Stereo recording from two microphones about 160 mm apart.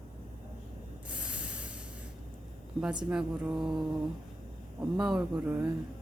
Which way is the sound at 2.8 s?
5° right (ahead or behind).